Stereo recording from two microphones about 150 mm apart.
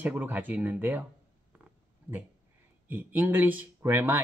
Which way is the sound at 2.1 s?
15° right (ahead or behind).